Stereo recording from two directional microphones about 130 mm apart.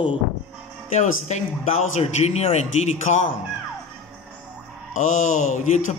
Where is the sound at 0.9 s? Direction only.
65° left (ahead or behind).